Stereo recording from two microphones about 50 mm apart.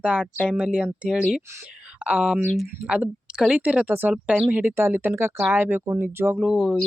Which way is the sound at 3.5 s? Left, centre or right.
Right.